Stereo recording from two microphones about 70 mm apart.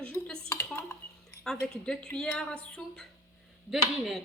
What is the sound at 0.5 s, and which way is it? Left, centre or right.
Dishes, left.